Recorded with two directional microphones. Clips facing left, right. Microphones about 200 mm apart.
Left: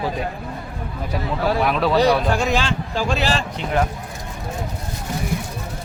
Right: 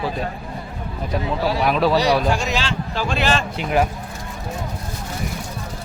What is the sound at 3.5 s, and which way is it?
Speech, 10° right (ahead or behind).